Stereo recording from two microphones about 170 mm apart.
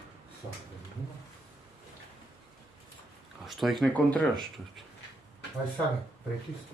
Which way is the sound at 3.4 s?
Centre (ahead or behind).